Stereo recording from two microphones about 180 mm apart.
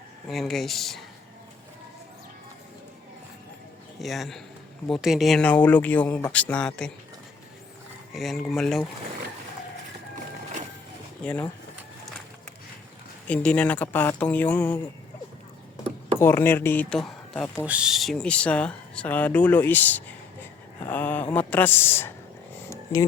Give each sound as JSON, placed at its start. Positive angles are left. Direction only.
{"t": 0.3, "sound": "speech", "side_deg": 0}
{"t": 4.0, "sound": "speech", "side_deg": 0}
{"t": 8.1, "sound": "speech", "side_deg": 0}
{"t": 11.2, "sound": "speech", "side_deg": 5}
{"t": 13.2, "sound": "speech", "side_deg": 5}
{"t": 16.1, "sound": "speech", "side_deg": 10}
{"t": 22.7, "sound": "a sound", "side_deg": 15}